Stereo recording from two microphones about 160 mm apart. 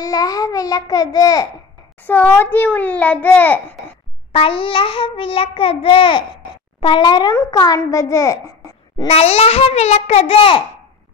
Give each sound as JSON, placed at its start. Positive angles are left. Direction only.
{"t": 0.0, "sound": "a child's voice", "side_deg": 20}
{"t": 2.0, "sound": "a child's voice", "side_deg": 10}
{"t": 4.3, "sound": "child singing", "side_deg": 35}
{"t": 6.8, "sound": "a child's voice", "side_deg": 30}
{"t": 8.9, "sound": "child singing", "side_deg": 35}